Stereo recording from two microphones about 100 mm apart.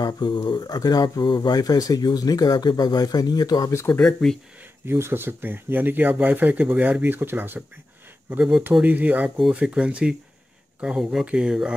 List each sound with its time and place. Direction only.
0.0 s speech: 45° left (ahead or behind)
3.9 s speech: 5° left (ahead or behind)
4.8 s speech: 25° right (ahead or behind)
8.8 s speech: 15° right (ahead or behind)